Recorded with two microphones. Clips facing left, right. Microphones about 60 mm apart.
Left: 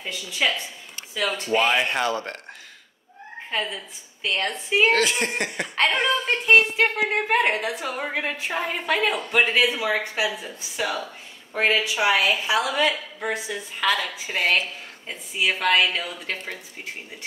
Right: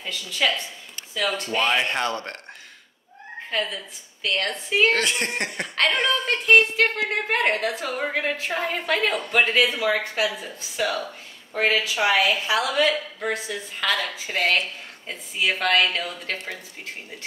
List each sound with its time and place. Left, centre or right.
0.0 s a woman's voice: centre
1.6 s speech: centre
3.4 s a woman's voice: centre
4.9 s a woman's voice: centre